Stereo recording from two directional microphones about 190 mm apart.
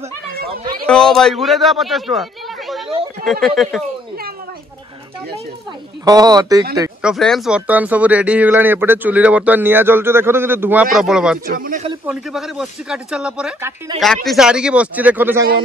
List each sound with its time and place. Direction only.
0.3 s a sound: 50° right (ahead or behind)
0.8 s speech: 5° left (ahead or behind)
6.0 s speech: 20° right (ahead or behind)
7.0 s speech: centre (ahead or behind)
11.4 s speech: 45° right (ahead or behind)
12.1 s speech: centre (ahead or behind)
13.9 s speech: centre (ahead or behind)